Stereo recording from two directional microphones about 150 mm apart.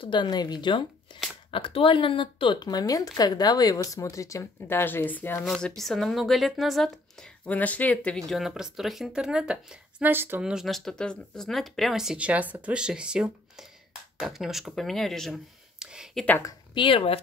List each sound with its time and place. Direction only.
0.0 s a woman's voice: 30° left (ahead or behind); by 5.4 s 10° left (ahead or behind)
5.4 s speech: centre (ahead or behind)
8.3 s speech: centre (ahead or behind)
10.4 s speech: 5° right (ahead or behind)
16.3 s a woman's voice: 15° left (ahead or behind)
16.7 s speech: 35° left (ahead or behind)